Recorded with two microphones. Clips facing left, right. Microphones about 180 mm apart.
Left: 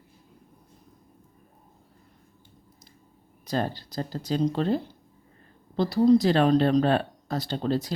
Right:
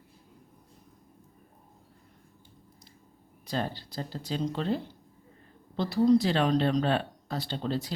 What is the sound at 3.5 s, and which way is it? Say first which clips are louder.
Speech: left 4 dB; 45° left (ahead or behind).